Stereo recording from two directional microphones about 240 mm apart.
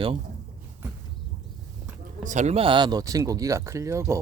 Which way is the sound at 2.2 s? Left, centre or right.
Right.